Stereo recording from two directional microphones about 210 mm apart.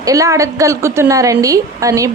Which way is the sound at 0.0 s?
15° right (ahead or behind).